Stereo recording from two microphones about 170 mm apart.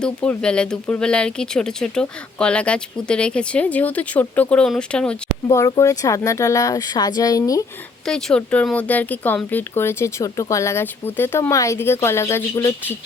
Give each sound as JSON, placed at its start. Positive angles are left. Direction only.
{"t": 0.0, "sound": "speech", "side_deg": 5}
{"t": 5.5, "sound": "speech", "side_deg": 20}
{"t": 8.0, "sound": "speech", "side_deg": 5}